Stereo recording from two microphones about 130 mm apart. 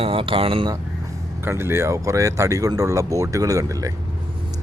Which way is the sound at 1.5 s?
20° right (ahead or behind).